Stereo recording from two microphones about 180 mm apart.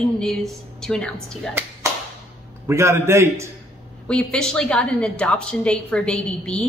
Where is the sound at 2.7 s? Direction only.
15° right (ahead or behind).